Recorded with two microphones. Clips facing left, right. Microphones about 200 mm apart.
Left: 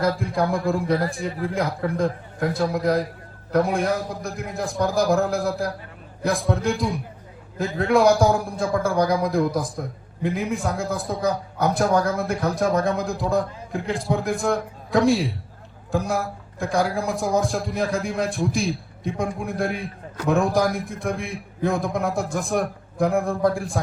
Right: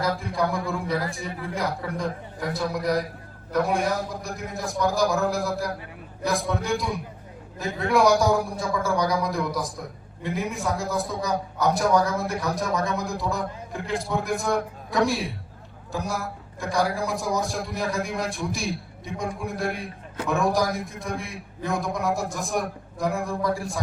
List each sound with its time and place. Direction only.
0.0 s a man's voice: 55° left (ahead or behind)